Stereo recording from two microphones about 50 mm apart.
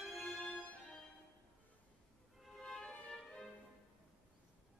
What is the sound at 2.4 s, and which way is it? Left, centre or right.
Music, centre.